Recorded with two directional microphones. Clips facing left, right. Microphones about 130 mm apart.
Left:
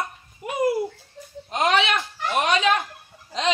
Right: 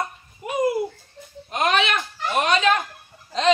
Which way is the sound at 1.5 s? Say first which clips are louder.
Even; 20° left (ahead or behind).